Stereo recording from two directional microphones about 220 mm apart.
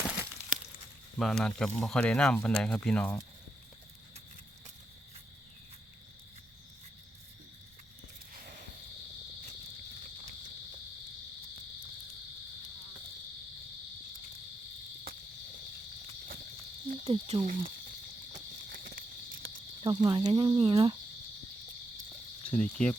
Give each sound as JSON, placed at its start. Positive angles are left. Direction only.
{"t": 1.2, "sound": "speech", "side_deg": 0}
{"t": 16.9, "sound": "cricket", "side_deg": -25}
{"t": 18.3, "sound": "cricket", "side_deg": -40}
{"t": 19.8, "sound": "speech", "side_deg": -20}
{"t": 22.4, "sound": "speech", "side_deg": 5}